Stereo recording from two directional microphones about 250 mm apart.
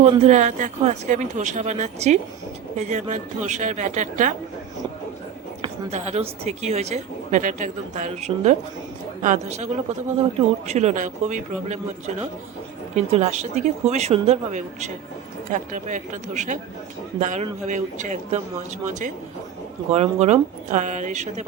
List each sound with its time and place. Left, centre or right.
0.0 s speech: right
5.6 s speech: right
10.7 s speech: right